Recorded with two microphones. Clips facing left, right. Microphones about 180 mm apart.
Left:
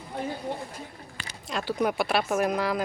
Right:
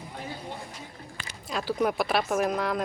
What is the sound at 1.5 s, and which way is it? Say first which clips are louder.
Speech: even; centre (ahead or behind).